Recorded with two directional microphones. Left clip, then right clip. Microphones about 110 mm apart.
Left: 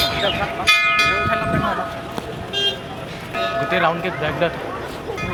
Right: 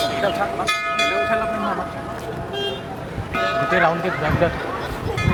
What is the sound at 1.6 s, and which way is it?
Speech, 15° left (ahead or behind).